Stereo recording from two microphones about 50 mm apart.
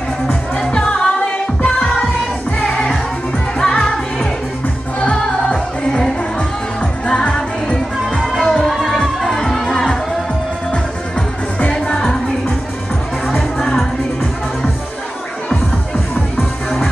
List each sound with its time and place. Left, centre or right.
0.6 s music: centre
2.6 s music: centre
11.7 s music: centre
13.3 s music: centre